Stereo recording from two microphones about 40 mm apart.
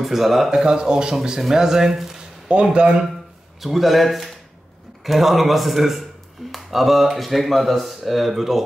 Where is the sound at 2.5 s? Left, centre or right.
Right.